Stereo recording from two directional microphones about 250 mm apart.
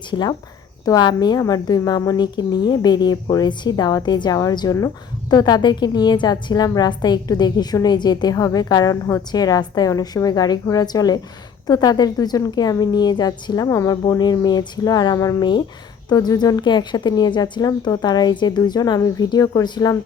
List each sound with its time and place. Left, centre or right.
0.1 s a woman's voice: centre